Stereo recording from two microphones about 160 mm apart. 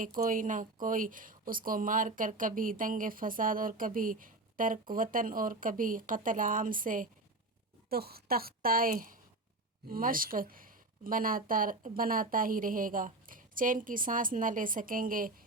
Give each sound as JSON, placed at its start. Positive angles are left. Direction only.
{"t": 0.2, "sound": "speech", "side_deg": -55}
{"t": 7.9, "sound": "a woman's voice", "side_deg": -75}